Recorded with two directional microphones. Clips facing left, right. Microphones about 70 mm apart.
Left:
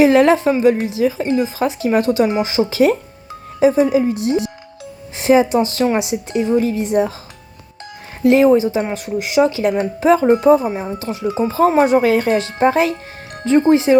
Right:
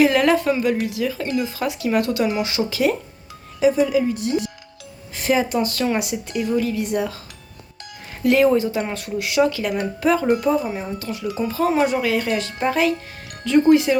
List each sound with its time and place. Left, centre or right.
0.0 s speech: left
2.7 s speech: left
8.2 s speech: left